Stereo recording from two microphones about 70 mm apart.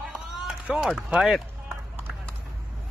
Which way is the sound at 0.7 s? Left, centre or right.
Centre.